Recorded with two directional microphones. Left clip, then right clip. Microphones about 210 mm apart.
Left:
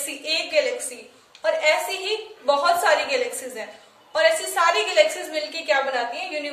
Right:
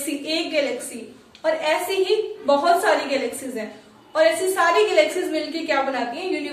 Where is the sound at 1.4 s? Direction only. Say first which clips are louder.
Left 1 dB; 45° left (ahead or behind).